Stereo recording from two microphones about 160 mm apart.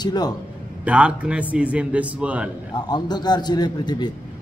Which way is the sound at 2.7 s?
25° left (ahead or behind).